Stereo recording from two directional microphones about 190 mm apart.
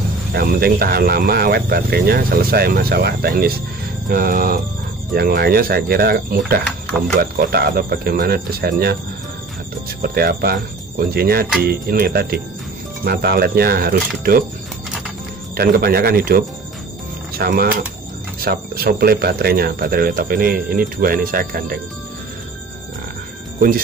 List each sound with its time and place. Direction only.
0.3 s speech: 50° right (ahead or behind)
10.0 s speech: 55° right (ahead or behind)
15.5 s speech: 55° right (ahead or behind)